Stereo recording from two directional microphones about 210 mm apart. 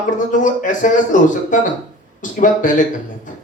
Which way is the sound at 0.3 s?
40° left (ahead or behind).